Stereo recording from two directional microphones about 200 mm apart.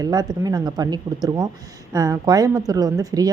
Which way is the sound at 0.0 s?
20° right (ahead or behind).